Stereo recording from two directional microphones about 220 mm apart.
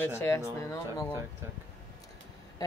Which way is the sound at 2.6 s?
15° left (ahead or behind).